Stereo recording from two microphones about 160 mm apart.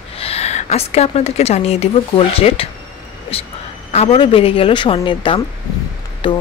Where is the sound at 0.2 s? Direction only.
40° left (ahead or behind).